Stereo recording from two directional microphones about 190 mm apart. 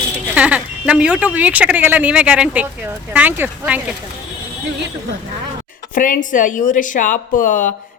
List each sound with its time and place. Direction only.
0.3 s speech: 5° right (ahead or behind)
5.9 s speech: 45° left (ahead or behind)